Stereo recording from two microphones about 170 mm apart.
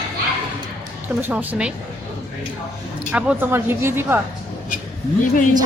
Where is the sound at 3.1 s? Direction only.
10° right (ahead or behind).